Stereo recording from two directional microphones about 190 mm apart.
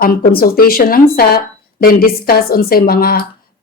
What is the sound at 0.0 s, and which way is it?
A woman's voice, 50° left (ahead or behind).